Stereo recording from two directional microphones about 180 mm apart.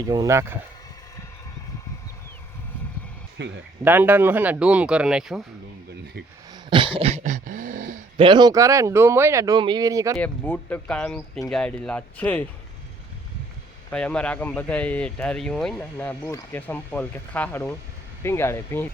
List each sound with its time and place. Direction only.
0.0 s speech: 20° right (ahead or behind)
3.4 s speech: 75° right (ahead or behind)
3.8 s speech: 10° right (ahead or behind)
6.5 s a sound: 25° right (ahead or behind); by 8.0 s 45° right (ahead or behind)
8.1 s speech: 25° right (ahead or behind)
10.2 s speech: 10° left (ahead or behind)
13.9 s speech: 5° left (ahead or behind)